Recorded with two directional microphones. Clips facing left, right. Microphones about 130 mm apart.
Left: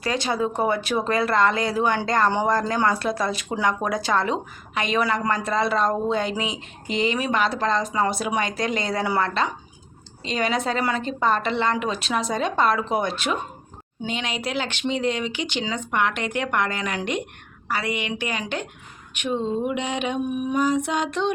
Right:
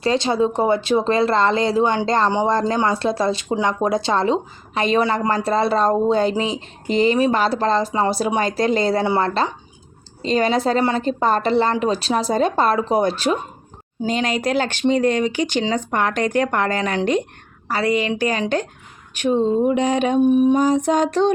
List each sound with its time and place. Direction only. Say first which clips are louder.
0.0 s speech: right 6 dB; 25° right (ahead or behind)